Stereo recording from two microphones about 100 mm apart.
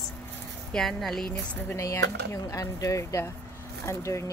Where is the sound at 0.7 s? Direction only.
5° left (ahead or behind).